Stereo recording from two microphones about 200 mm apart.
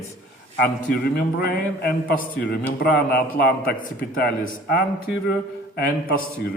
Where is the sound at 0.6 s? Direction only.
50° left (ahead or behind).